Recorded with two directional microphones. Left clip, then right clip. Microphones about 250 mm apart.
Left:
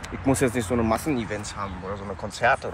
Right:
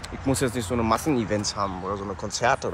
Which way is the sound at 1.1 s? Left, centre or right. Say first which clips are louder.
Right 2 dB; right.